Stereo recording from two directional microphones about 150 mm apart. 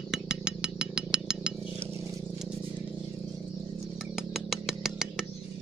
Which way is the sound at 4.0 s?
Centre (ahead or behind).